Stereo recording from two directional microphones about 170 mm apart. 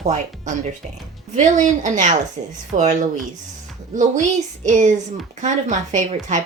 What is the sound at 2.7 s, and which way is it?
Speech, 45° right (ahead or behind).